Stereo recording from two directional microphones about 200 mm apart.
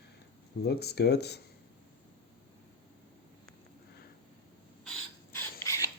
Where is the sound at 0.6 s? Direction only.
55° left (ahead or behind).